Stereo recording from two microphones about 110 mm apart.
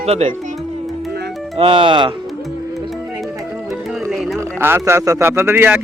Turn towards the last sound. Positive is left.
turn(degrees=-20)  # may be behind; listen again after turning